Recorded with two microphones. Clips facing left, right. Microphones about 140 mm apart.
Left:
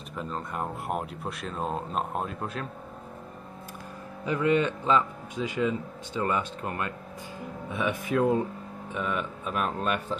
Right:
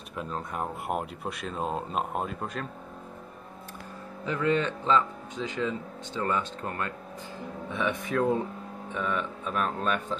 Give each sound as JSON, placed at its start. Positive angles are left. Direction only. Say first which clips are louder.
{"t": 0.1, "sound": "speech", "louder": "even", "side_deg": -5}
{"t": 4.3, "sound": "a man's voice", "louder": "left 2 dB", "side_deg": 15}